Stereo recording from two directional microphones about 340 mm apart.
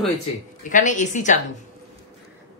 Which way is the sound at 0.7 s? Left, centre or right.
Left.